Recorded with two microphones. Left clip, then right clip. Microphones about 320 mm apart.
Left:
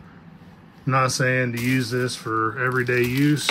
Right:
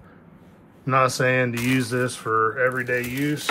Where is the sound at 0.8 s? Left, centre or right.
Centre.